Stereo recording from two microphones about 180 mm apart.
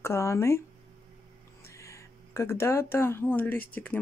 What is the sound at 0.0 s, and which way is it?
Speech, 15° left (ahead or behind).